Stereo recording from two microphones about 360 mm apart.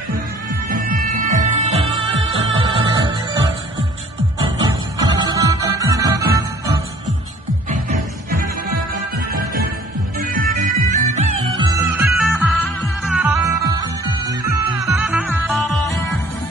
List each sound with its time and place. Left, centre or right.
0.7 s music: right
4.9 s music: centre
7.7 s music: right; by 16.0 s centre